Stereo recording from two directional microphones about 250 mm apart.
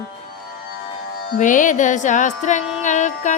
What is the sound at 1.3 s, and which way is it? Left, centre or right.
Music, left.